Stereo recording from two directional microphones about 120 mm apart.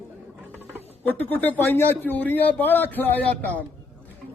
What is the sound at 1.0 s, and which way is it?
A man's voice, 15° left (ahead or behind).